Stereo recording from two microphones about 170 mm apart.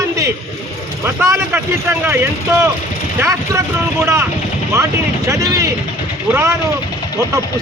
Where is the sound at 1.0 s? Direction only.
15° right (ahead or behind).